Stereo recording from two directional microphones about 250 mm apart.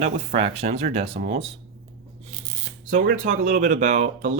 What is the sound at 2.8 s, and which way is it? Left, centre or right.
Speech, right.